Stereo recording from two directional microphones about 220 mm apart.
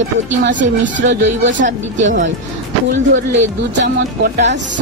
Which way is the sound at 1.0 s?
55° right (ahead or behind).